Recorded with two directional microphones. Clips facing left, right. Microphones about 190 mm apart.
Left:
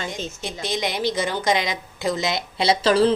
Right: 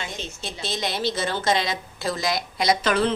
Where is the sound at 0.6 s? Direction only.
15° left (ahead or behind).